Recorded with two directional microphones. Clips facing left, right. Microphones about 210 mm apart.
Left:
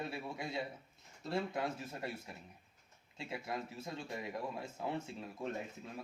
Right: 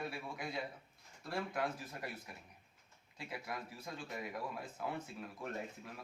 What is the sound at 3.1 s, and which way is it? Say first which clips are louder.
A man's voice: left 3 dB; 25° left (ahead or behind).